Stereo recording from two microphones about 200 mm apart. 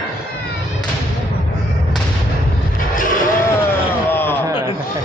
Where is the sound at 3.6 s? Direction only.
10° left (ahead or behind).